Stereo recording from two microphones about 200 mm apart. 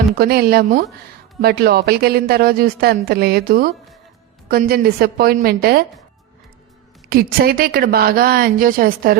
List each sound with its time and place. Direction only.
0.2 s speech: 50° right (ahead or behind)
7.1 s speech: 50° right (ahead or behind)